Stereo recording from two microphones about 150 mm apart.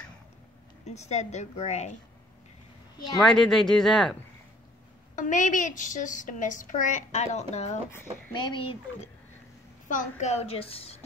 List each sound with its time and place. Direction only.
0.8 s a woman's voice: 50° left (ahead or behind)
3.2 s speech: 5° left (ahead or behind)
5.1 s a woman's voice: 60° left (ahead or behind)
8.3 s speech: 30° left (ahead or behind)
9.8 s a woman's voice: 55° left (ahead or behind); by 11.0 s 40° left (ahead or behind)